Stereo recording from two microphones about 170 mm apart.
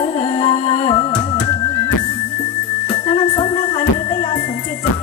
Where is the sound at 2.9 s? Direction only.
25° left (ahead or behind).